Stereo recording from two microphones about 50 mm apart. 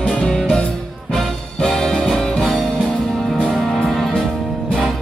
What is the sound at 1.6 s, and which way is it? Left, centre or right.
Music, centre.